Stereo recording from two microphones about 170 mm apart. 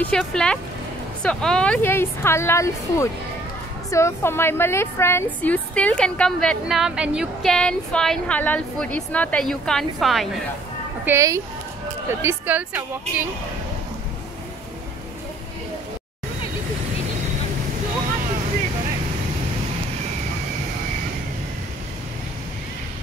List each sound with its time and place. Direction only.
0.0 s a woman's voice: 5° left (ahead or behind)
11.1 s speech: 15° right (ahead or behind)